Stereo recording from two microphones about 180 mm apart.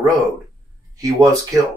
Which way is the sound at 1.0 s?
15° right (ahead or behind).